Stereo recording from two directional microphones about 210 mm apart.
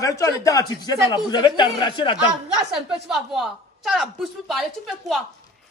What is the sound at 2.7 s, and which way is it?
A woman's voice, centre (ahead or behind).